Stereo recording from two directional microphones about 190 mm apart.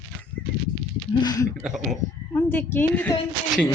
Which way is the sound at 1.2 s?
20° left (ahead or behind).